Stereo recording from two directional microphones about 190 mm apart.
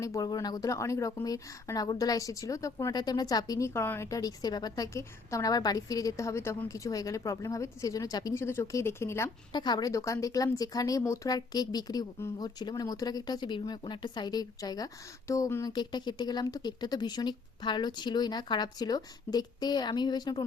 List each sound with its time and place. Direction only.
0.0 s a woman's voice: 20° left (ahead or behind)